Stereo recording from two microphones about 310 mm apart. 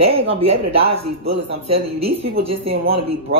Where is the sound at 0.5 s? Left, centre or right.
Right.